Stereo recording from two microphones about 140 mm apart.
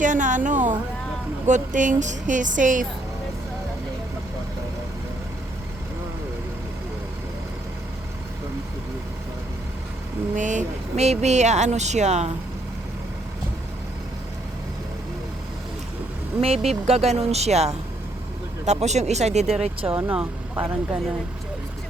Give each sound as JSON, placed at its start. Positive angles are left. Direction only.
{"t": 0.0, "sound": "a sound", "side_deg": -65}
{"t": 1.5, "sound": "speech", "side_deg": -65}
{"t": 10.3, "sound": "speech", "side_deg": -60}
{"t": 16.4, "sound": "speech", "side_deg": -45}
{"t": 19.9, "sound": "speech", "side_deg": -15}